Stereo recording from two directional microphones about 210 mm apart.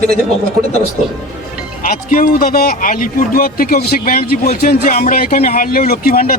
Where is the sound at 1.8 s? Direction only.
40° left (ahead or behind).